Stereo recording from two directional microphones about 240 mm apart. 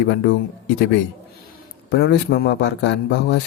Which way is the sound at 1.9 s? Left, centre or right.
Left.